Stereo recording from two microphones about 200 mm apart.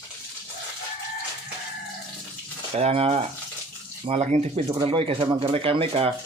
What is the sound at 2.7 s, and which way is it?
Speech, 30° right (ahead or behind).